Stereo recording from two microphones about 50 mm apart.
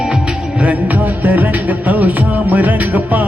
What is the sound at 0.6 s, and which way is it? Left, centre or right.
Music, right.